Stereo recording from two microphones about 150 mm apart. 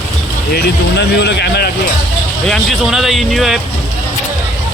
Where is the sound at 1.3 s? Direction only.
90° left.